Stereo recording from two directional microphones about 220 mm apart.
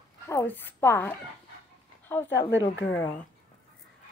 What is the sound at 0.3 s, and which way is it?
A woman's voice, 10° left (ahead or behind).